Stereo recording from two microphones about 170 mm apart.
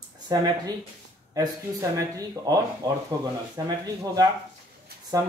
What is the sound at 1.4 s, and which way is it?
Speech, 20° right (ahead or behind).